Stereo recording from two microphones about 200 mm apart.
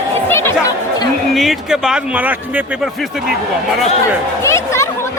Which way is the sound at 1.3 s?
Centre (ahead or behind).